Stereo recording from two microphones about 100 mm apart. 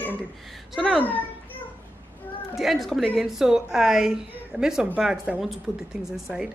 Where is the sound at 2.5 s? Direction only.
Centre (ahead or behind).